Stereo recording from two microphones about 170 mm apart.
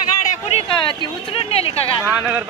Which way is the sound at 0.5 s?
30° left (ahead or behind).